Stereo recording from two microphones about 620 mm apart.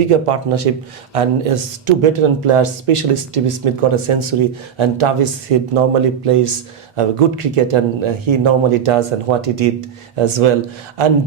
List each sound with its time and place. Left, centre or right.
0.1 s speech: right